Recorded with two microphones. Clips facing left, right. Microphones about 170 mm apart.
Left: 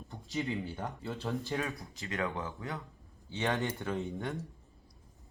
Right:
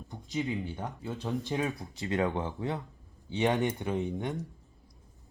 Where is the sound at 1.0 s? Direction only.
15° right (ahead or behind).